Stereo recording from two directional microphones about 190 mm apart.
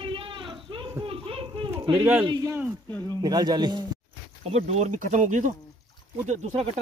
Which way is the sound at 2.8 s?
15° left (ahead or behind).